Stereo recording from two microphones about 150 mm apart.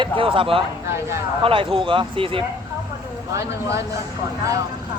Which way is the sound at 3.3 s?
20° right (ahead or behind).